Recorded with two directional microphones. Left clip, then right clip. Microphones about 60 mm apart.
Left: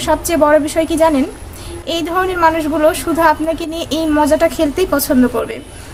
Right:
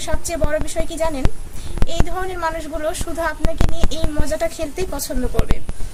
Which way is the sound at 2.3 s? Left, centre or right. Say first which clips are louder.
Left 13 dB; left.